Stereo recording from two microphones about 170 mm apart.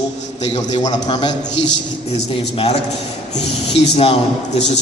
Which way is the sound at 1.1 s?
25° left (ahead or behind).